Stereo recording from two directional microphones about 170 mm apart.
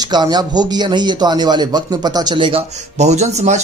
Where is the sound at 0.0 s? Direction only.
25° right (ahead or behind).